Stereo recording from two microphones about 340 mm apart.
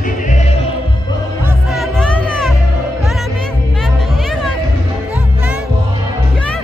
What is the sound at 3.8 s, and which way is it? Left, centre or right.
Music, centre.